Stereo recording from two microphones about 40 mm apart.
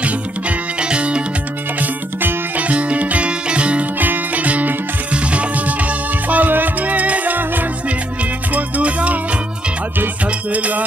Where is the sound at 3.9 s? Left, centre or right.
Right.